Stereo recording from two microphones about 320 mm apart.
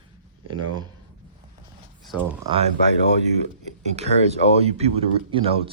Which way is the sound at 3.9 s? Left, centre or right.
Centre.